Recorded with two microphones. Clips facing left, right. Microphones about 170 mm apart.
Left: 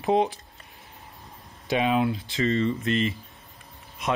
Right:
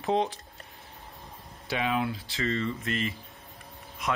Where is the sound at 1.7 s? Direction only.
20° left (ahead or behind).